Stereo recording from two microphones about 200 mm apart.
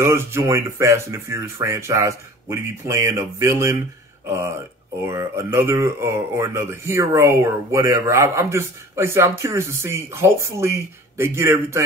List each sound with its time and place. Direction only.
0.0 s speech: 15° right (ahead or behind)